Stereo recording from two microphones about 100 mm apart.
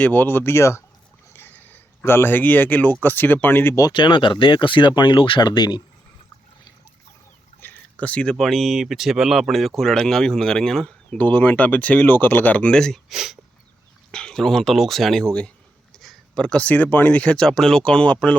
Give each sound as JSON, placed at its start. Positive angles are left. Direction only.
{"t": 0.0, "sound": "speech", "side_deg": 20}
{"t": 1.3, "sound": "a sound", "side_deg": 20}
{"t": 2.0, "sound": "speech", "side_deg": 20}
{"t": 3.9, "sound": "speech", "side_deg": 50}
{"t": 7.6, "sound": "speech", "side_deg": 15}
{"t": 11.2, "sound": "speech", "side_deg": 15}
{"t": 14.1, "sound": "speech", "side_deg": 5}